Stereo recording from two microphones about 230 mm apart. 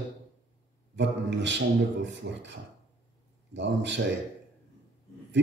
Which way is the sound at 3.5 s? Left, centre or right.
Right.